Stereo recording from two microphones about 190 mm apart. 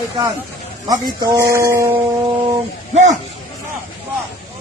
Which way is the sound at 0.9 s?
20° right (ahead or behind).